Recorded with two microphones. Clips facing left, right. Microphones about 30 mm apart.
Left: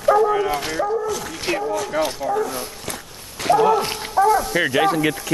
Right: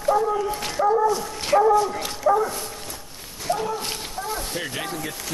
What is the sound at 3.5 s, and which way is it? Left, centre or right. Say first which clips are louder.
Speech: left 9 dB; left.